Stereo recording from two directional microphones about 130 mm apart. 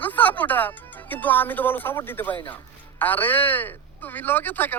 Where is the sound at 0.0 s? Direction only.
15° left (ahead or behind).